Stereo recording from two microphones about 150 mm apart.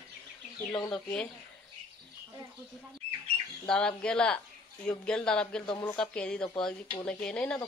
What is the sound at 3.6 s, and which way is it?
A woman's voice, 5° left (ahead or behind).